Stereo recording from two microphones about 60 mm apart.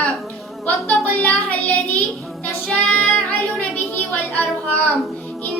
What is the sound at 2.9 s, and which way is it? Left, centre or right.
Music, left.